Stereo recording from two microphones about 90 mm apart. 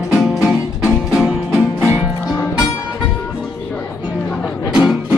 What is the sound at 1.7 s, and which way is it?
Music, 25° right (ahead or behind).